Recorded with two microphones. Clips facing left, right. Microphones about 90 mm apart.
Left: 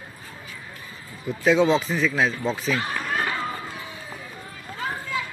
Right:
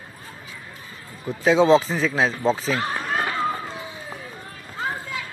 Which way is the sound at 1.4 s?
35° right (ahead or behind).